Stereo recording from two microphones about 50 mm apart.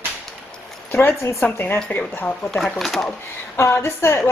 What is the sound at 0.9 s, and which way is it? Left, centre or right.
Speech, left.